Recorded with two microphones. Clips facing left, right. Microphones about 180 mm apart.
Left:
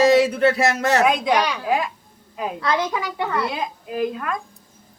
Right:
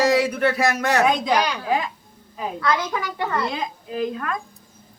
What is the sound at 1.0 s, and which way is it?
Speech, 5° left (ahead or behind).